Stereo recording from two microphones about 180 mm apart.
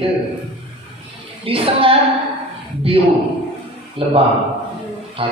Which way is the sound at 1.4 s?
30° right (ahead or behind).